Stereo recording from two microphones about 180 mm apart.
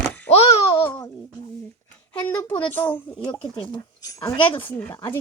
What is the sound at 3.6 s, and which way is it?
Speech, 25° left (ahead or behind).